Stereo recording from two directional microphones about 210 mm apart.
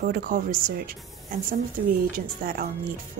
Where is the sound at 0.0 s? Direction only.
45° right (ahead or behind).